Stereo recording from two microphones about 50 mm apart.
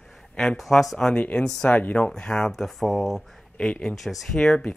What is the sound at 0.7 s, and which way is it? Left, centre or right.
Speech, centre.